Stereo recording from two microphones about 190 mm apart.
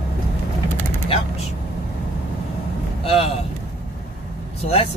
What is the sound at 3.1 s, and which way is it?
Speech, 30° left (ahead or behind).